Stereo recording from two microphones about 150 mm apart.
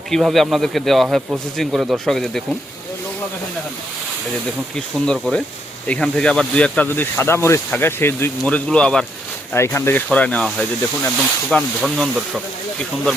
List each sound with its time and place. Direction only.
0.1 s speech: centre (ahead or behind)
4.7 s speech: 5° left (ahead or behind)
9.5 s speech: 15° left (ahead or behind); by 12.4 s 5° right (ahead or behind)